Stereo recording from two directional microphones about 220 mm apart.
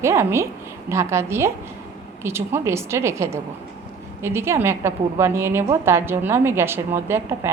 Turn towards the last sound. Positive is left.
turn(degrees=-10)  # may be behind; listen again after turning